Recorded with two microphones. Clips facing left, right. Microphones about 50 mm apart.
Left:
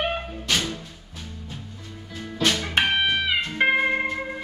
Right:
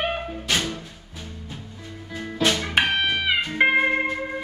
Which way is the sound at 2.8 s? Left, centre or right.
Centre.